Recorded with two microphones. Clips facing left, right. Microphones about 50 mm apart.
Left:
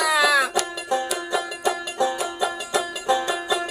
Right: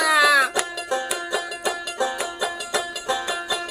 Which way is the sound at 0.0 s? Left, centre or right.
Centre.